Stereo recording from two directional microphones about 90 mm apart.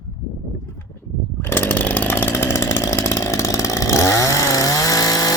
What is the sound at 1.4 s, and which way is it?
Chainsaw, 25° left (ahead or behind).